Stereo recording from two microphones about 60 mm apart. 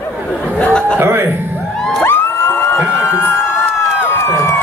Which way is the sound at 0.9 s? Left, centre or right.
Right.